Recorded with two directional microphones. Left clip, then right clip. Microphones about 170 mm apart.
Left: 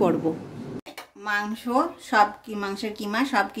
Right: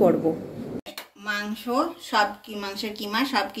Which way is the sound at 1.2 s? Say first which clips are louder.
Left 2 dB; 60° left (ahead or behind).